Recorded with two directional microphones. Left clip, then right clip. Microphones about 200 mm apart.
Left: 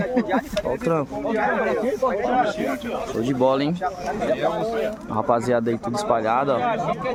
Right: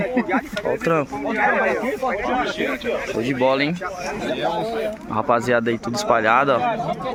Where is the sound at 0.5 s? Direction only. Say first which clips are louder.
Right 4 dB; centre (ahead or behind).